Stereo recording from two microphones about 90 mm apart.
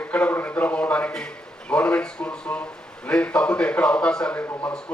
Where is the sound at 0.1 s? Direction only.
20° left (ahead or behind).